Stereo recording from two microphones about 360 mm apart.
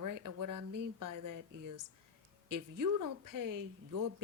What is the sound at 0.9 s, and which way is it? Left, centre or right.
A woman's voice, right.